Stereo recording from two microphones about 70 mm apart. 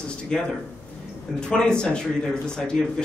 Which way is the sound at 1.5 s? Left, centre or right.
Centre.